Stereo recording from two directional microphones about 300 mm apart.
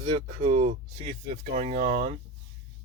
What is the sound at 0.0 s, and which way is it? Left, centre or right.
Speech, right.